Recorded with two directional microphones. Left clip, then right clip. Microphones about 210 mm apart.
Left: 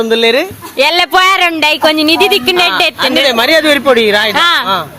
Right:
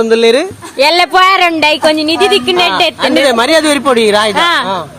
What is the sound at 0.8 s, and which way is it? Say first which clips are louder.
Speech: right 1 dB; 5° left (ahead or behind).